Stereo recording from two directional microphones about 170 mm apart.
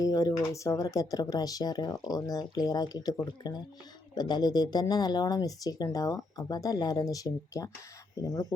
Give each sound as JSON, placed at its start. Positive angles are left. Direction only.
{"t": 0.0, "sound": "speech", "side_deg": 20}